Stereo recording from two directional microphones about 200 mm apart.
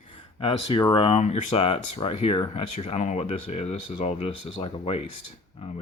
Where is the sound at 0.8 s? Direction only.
25° left (ahead or behind).